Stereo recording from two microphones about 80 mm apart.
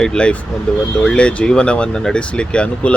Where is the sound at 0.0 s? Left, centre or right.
Centre.